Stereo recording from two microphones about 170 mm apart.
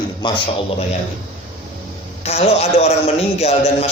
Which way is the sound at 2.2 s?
40° left (ahead or behind).